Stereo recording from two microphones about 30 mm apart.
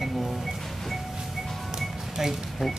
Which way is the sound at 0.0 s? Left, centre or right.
Centre.